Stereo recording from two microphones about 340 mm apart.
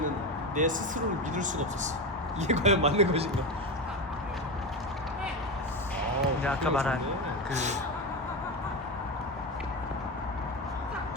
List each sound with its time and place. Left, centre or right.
0.5 s speech: right
6.4 s speech: centre
7.5 s speech: centre